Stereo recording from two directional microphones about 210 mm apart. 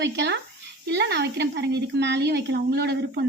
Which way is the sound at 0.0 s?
55° right (ahead or behind).